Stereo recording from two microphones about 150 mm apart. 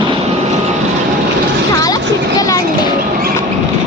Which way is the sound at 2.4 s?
20° left (ahead or behind).